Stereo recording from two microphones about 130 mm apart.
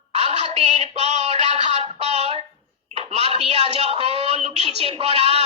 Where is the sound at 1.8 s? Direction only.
55° right (ahead or behind).